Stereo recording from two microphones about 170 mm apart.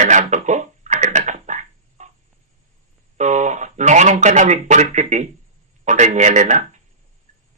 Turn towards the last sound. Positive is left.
turn(degrees=-45)  # may be behind; listen again after turning